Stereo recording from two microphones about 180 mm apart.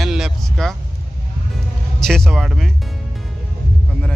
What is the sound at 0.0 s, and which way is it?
Vehicle, centre (ahead or behind).